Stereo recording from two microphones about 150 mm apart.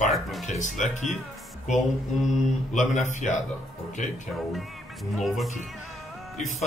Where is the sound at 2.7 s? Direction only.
55° left (ahead or behind).